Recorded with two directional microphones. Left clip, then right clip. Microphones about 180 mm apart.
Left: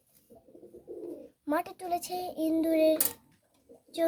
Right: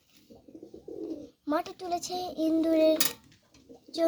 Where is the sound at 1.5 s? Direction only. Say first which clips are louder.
Even; 20° left (ahead or behind).